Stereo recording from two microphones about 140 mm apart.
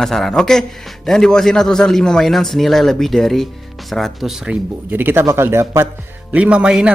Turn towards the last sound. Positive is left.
turn(degrees=-5)  # may be behind; listen again after turning